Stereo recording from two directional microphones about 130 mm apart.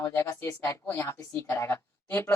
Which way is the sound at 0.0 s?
15° left (ahead or behind).